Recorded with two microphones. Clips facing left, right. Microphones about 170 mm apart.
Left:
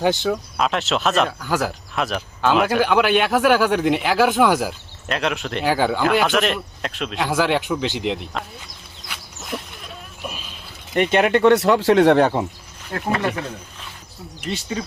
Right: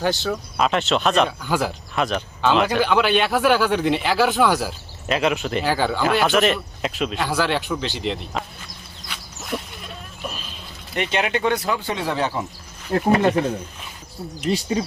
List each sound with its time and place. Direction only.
0.0 s speech: 15° left (ahead or behind)
0.3 s speech: centre (ahead or behind)
5.0 s speech: 5° right (ahead or behind)
5.6 s speech: 10° left (ahead or behind)
6.0 s speech: centre (ahead or behind)
7.3 s speech: 15° left (ahead or behind)
9.0 s goat: centre (ahead or behind)
10.9 s speech: 50° left (ahead or behind)
12.9 s speech: 25° right (ahead or behind)
14.5 s speech: 35° right (ahead or behind)